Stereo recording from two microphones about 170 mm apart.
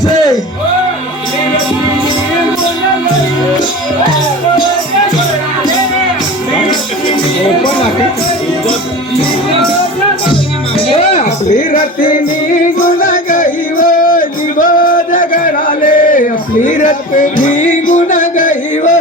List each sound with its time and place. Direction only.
11.2 s music: 50° left (ahead or behind)